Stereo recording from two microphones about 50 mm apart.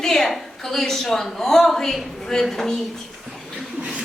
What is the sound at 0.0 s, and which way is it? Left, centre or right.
A woman's voice, centre.